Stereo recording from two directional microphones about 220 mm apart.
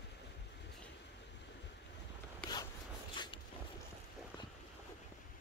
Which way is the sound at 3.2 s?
20° left (ahead or behind).